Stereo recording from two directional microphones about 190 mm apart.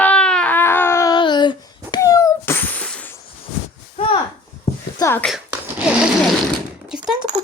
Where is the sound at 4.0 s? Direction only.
30° left (ahead or behind).